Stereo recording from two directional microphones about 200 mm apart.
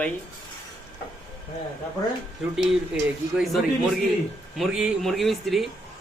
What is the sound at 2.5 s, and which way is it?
Speech, 5° right (ahead or behind).